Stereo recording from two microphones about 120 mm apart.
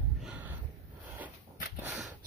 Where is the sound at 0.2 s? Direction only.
15° right (ahead or behind).